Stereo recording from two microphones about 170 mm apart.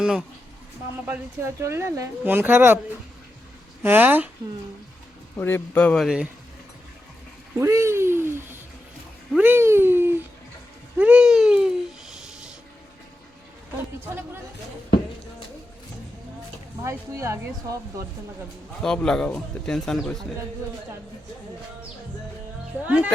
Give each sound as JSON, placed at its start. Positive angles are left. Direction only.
{"t": 0.0, "sound": "speech", "side_deg": -5}
{"t": 3.8, "sound": "speech", "side_deg": -10}
{"t": 5.4, "sound": "speech", "side_deg": 10}
{"t": 7.6, "sound": "speech", "side_deg": -15}
{"t": 10.9, "sound": "babbling", "side_deg": -5}
{"t": 16.8, "sound": "speech", "side_deg": -15}
{"t": 18.8, "sound": "speech", "side_deg": 5}